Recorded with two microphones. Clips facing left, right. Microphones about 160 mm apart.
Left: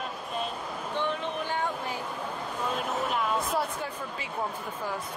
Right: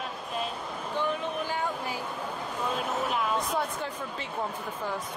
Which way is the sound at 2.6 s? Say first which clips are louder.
Even; centre (ahead or behind).